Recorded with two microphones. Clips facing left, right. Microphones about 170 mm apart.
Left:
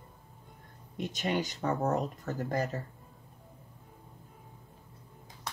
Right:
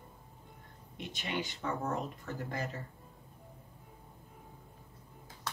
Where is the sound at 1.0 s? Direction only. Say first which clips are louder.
Left 6 dB; 40° left (ahead or behind).